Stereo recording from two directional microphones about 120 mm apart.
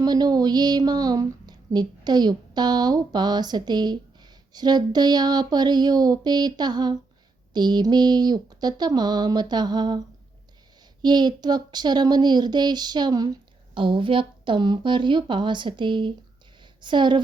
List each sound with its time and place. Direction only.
0.0 s speech: 35° right (ahead or behind)
11.0 s speech: 35° right (ahead or behind)